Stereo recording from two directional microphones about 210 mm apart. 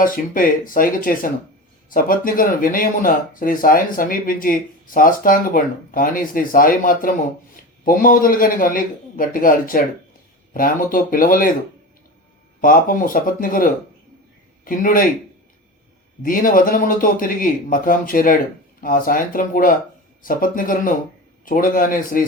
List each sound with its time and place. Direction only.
0.0 s a man's voice: 40° left (ahead or behind)
12.6 s a man's voice: 40° left (ahead or behind)
16.2 s speech: 40° left (ahead or behind)